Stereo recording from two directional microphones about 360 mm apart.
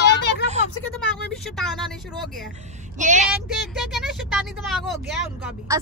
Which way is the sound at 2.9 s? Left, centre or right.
Centre.